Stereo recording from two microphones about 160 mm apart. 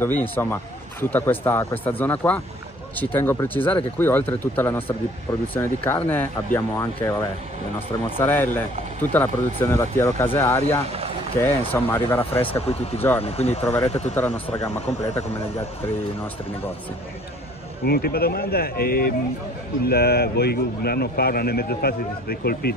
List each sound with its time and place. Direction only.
0.0 s speech: 15° left (ahead or behind)
8.2 s speech: 10° left (ahead or behind)
12.4 s speech: 40° left (ahead or behind)
14.1 s speech: 15° left (ahead or behind)
17.8 s a man's voice: 75° left (ahead or behind)